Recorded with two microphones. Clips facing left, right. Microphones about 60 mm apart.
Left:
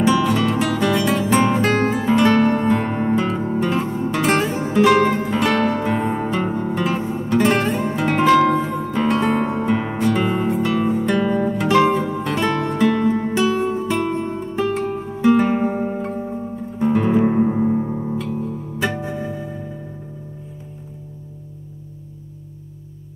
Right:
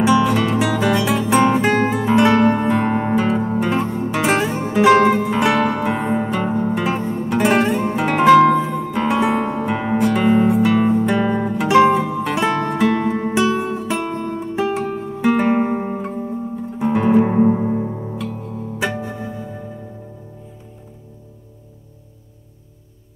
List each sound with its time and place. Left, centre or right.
0.0 s music: centre
2.9 s music: centre
3.2 s music: centre
8.5 s music: centre
15.5 s music: right
16.7 s music: centre